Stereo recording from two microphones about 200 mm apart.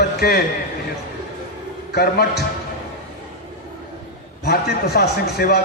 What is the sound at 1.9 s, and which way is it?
Speech, 50° left (ahead or behind).